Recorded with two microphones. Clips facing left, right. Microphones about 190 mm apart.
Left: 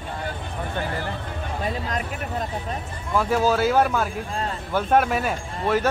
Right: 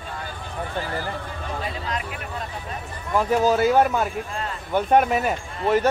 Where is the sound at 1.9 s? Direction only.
45° left (ahead or behind).